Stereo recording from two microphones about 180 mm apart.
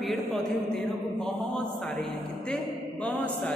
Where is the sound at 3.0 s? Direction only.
5° left (ahead or behind).